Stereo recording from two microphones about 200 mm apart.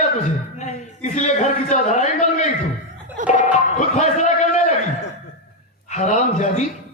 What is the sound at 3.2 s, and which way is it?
Music, 40° right (ahead or behind).